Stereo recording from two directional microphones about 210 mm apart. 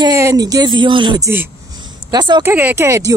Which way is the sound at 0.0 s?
15° right (ahead or behind).